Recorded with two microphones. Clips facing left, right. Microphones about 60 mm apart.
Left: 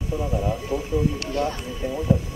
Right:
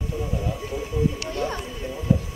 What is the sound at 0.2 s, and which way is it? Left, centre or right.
Speech, centre.